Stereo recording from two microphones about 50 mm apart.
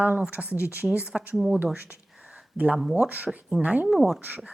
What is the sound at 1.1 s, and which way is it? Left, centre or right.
Speech, centre.